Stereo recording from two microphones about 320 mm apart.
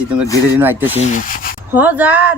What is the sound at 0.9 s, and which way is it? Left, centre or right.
Speech, left.